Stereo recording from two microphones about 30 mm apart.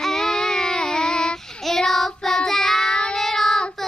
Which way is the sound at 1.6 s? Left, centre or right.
Centre.